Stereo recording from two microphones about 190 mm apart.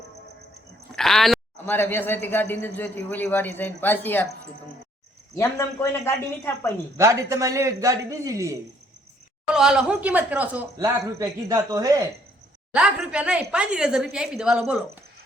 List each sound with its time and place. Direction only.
0.9 s a man's voice: centre (ahead or behind)
5.4 s a man's voice: 15° left (ahead or behind)
6.9 s speech: 15° right (ahead or behind)
9.5 s speech: 5° right (ahead or behind)
12.7 s a woman's voice: 5° right (ahead or behind)